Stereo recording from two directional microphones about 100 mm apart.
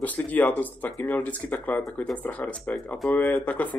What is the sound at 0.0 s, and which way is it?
Speech, 15° left (ahead or behind).